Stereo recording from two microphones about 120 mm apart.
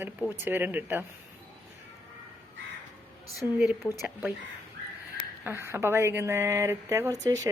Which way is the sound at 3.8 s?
15° left (ahead or behind).